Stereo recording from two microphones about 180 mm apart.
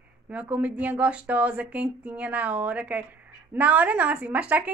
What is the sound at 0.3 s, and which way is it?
A woman's voice, 5° right (ahead or behind).